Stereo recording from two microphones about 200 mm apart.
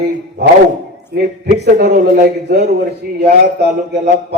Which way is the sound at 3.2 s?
55° right (ahead or behind).